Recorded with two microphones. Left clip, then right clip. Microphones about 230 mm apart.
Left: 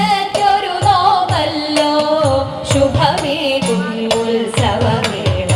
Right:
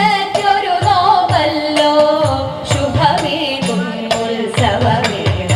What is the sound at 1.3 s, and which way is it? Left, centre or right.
Music, left.